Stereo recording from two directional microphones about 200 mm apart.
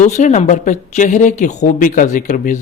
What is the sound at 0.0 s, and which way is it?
Speech, 35° left (ahead or behind).